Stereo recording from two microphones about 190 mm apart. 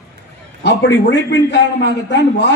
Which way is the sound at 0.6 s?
65° left (ahead or behind).